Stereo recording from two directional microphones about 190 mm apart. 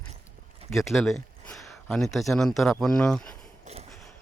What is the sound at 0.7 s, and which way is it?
Speech, centre (ahead or behind).